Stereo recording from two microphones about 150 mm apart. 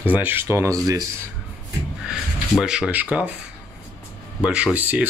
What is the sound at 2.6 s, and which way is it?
Speech, 5° right (ahead or behind).